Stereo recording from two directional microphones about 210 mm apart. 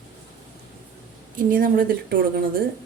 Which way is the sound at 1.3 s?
40° right (ahead or behind).